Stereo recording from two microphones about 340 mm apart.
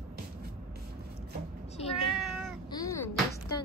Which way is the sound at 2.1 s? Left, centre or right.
Centre.